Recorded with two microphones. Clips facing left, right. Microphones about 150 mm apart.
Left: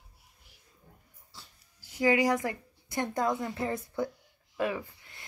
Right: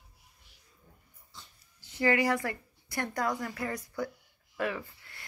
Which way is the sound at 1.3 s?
10° left (ahead or behind).